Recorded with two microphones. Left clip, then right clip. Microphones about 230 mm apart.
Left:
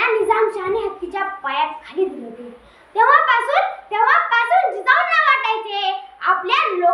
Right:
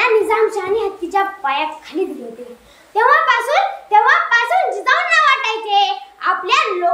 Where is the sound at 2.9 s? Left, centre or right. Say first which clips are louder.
Right 1 dB; centre.